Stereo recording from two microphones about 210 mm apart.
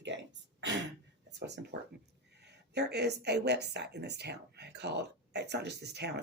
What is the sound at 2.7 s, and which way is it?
A woman's voice, 50° right (ahead or behind).